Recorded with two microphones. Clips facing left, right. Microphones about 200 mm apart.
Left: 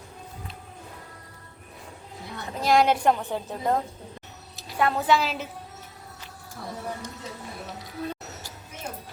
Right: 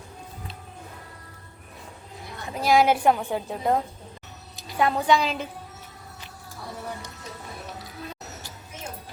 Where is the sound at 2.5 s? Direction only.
5° right (ahead or behind).